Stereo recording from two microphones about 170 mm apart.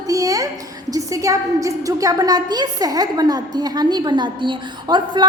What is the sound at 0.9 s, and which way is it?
A woman's voice, 20° right (ahead or behind).